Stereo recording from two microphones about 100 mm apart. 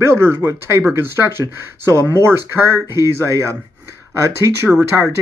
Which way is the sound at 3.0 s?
30° right (ahead or behind).